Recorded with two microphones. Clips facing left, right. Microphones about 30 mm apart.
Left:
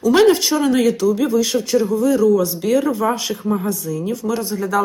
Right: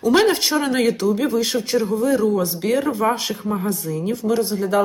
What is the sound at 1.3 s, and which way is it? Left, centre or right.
Speech, centre.